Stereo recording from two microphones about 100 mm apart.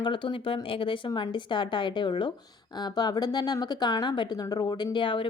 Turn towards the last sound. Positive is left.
turn(degrees=55)  # may be behind; listen again after turning